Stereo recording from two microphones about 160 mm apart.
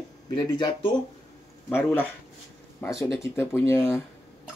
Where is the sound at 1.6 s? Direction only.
10° left (ahead or behind).